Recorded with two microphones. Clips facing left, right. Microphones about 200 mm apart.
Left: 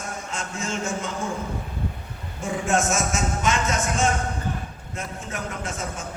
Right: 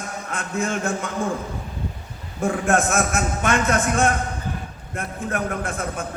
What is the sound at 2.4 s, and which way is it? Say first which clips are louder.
A man's voice: right 4 dB; 55° right (ahead or behind).